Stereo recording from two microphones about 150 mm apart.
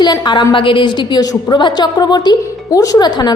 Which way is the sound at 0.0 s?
30° left (ahead or behind).